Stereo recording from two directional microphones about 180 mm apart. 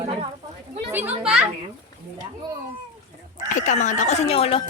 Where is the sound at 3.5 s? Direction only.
45° left (ahead or behind).